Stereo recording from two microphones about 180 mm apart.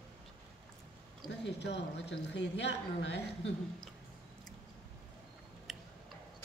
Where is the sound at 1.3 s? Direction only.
70° left (ahead or behind).